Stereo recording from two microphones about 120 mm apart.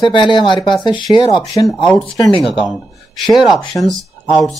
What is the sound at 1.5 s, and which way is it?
Speech, centre (ahead or behind).